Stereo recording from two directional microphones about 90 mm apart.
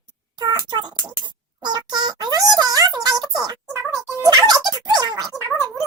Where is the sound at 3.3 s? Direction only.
45° right (ahead or behind).